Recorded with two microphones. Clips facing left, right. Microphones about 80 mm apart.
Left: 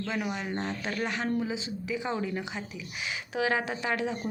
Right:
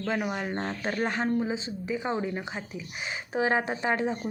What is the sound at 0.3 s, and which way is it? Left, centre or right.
Speech, right.